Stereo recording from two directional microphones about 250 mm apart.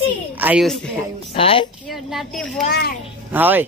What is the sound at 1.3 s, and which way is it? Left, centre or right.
Speech, left.